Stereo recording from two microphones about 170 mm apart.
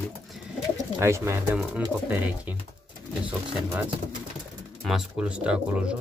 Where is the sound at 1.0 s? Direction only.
15° right (ahead or behind).